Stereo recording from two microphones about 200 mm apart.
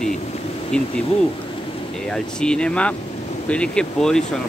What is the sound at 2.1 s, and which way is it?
Speech, 5° left (ahead or behind).